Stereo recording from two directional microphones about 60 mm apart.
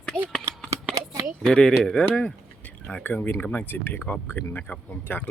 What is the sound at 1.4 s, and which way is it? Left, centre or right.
Speech, centre.